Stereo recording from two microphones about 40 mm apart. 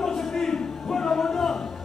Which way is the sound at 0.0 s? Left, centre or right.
Centre.